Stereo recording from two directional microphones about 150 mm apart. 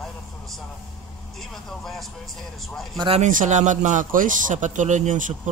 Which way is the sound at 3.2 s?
55° right (ahead or behind).